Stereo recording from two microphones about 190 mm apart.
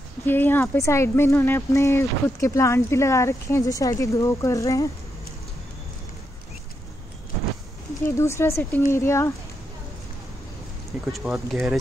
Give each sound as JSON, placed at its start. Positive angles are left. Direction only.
{"t": 0.3, "sound": "speech", "side_deg": 10}
{"t": 8.0, "sound": "speech", "side_deg": 15}
{"t": 11.1, "sound": "speech", "side_deg": 0}